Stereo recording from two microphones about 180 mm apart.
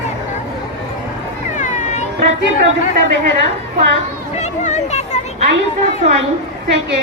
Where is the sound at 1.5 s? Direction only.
45° left (ahead or behind).